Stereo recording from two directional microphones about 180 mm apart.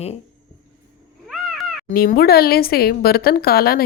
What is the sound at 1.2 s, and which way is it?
Cat, centre (ahead or behind).